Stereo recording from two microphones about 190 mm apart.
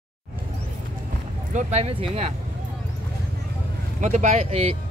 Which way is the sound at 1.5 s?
35° right (ahead or behind).